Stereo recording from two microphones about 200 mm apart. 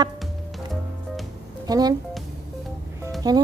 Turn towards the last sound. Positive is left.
turn(degrees=-20)  # may be behind; listen again after turning